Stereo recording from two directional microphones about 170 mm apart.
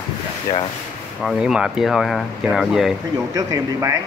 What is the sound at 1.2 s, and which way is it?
Speech, centre (ahead or behind).